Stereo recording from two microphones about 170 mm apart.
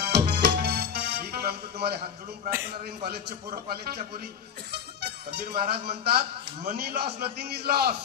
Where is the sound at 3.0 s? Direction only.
65° right (ahead or behind).